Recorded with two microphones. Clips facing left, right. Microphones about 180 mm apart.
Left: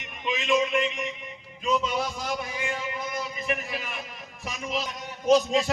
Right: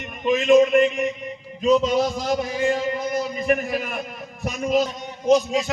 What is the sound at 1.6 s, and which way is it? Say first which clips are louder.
A man's voice: right 9 dB; 40° right (ahead or behind).